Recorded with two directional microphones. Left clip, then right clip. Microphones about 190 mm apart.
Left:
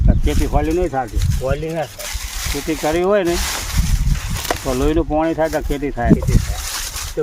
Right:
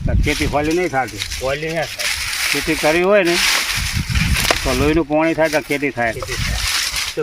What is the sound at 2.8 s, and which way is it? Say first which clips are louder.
Speech: right 2 dB; 15° right (ahead or behind).